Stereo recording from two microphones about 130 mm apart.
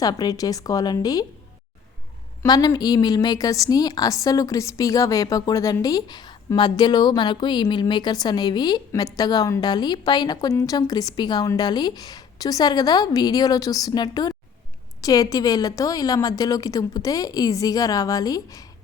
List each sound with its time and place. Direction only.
0.0 s a woman's voice: 30° left (ahead or behind)
2.5 s a woman's voice: 30° left (ahead or behind)